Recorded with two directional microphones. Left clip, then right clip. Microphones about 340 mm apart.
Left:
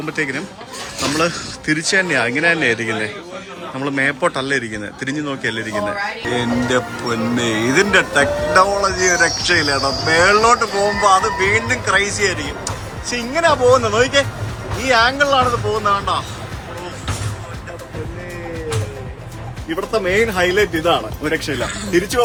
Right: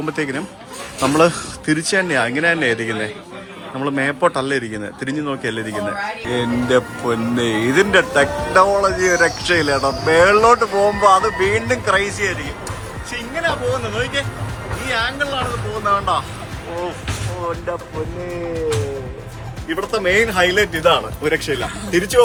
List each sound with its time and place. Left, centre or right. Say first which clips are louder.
0.0 s speech: left 1 dB; centre
13.1 s speech: left 6 dB; centre
15.8 s speech: right 3 dB; centre
18.5 s music: right 4 dB; centre
19.6 s speech: even; centre